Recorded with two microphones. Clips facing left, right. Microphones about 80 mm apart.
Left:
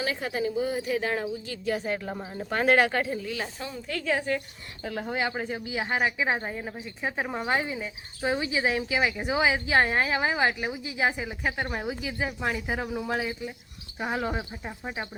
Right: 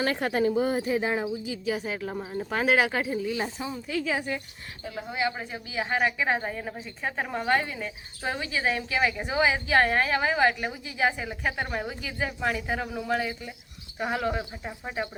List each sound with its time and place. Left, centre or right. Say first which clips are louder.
0.0 s a woman's voice: right 4 dB; right
0.9 s speech: right 1 dB; right
1.1 s speech: right 1 dB; centre
3.2 s speech: right 3 dB; right
3.8 s speech: left 2 dB; centre
4.8 s speech: left 3 dB; left
5.0 s speech: right 1 dB; left
5.6 s speech: right 2 dB; left; by 15.1 s centre